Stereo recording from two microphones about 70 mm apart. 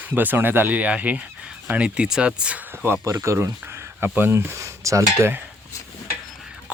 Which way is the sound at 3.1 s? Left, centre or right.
Right.